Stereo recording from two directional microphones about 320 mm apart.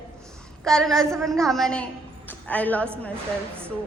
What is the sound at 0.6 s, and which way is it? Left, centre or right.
A woman's voice, centre.